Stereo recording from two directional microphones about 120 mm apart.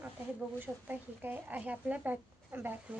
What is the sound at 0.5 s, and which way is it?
Speech, 15° right (ahead or behind).